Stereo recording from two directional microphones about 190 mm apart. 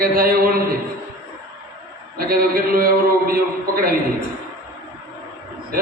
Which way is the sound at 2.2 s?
50° right (ahead or behind).